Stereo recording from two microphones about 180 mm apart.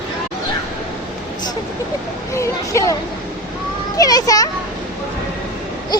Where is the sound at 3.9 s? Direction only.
20° left (ahead or behind).